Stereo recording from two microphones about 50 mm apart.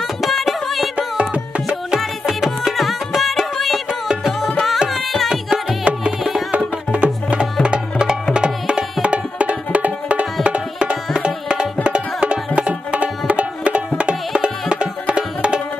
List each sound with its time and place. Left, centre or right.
0.0 s music: centre
1.3 s music: centre
5.9 s music: right
11.1 s tabla: centre
11.8 s music: right